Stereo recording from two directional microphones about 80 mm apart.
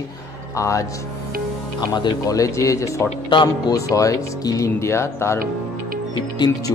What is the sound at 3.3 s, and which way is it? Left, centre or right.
Speech, left.